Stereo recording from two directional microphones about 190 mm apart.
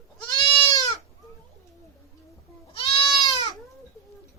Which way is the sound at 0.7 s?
20° left (ahead or behind).